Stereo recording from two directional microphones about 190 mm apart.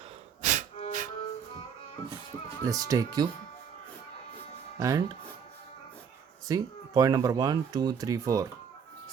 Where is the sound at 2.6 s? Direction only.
20° right (ahead or behind).